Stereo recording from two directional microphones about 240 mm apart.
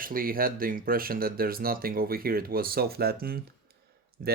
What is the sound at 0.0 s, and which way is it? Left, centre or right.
Speech, right.